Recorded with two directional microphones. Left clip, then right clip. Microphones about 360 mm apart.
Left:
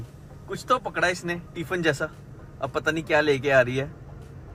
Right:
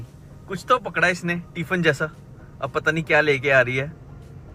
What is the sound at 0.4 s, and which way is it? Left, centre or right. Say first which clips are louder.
A man's voice: right 4 dB; centre.